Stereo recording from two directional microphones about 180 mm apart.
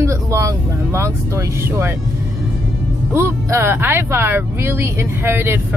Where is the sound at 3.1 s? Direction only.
15° right (ahead or behind).